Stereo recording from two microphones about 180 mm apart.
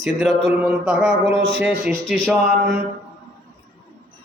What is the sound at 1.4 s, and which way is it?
Speech, 75° right (ahead or behind).